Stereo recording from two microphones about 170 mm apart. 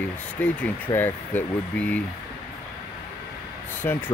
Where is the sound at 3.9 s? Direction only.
10° left (ahead or behind).